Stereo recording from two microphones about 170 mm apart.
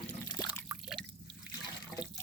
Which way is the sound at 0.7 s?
5° right (ahead or behind).